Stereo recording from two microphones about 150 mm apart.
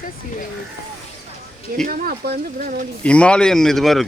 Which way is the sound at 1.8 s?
75° right (ahead or behind).